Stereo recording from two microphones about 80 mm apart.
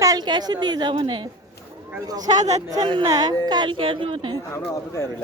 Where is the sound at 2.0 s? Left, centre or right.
Right.